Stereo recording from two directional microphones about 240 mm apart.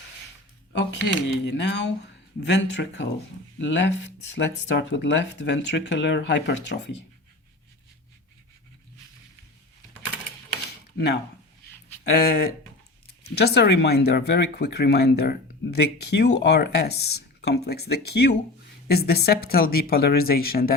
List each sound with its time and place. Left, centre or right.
0.7 s speech: left
10.9 s speech: left